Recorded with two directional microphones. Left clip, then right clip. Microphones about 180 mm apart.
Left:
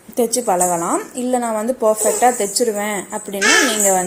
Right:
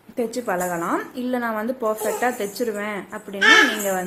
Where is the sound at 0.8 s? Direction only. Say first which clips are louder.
Left 4 dB; 5° left (ahead or behind).